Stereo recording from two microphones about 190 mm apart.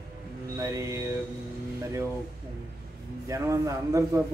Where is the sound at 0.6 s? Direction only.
15° right (ahead or behind).